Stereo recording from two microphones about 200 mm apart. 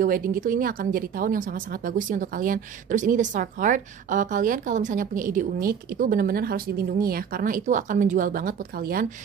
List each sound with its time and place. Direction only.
0.0 s a woman's voice: 45° right (ahead or behind)